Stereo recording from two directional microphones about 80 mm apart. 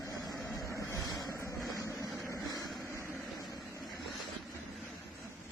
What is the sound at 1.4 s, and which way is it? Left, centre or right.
Vehicle, left.